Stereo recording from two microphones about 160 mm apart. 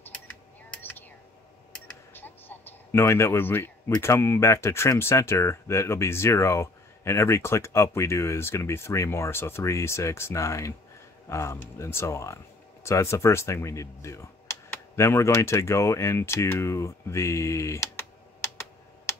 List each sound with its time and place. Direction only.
2.1 s speech: 10° left (ahead or behind)